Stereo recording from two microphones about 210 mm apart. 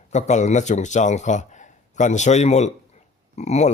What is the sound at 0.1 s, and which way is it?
Speech, 35° left (ahead or behind).